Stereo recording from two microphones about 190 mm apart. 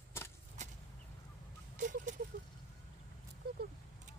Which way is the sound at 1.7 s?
40° right (ahead or behind).